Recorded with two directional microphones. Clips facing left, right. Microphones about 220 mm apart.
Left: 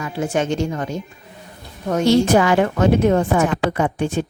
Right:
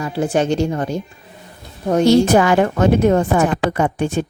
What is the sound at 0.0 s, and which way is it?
A woman's voice, 35° right (ahead or behind).